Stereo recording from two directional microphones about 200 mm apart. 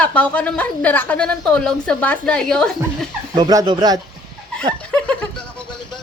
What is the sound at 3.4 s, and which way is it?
Speech, 20° right (ahead or behind).